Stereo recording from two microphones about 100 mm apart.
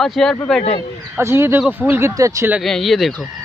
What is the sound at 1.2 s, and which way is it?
Speech, 25° right (ahead or behind).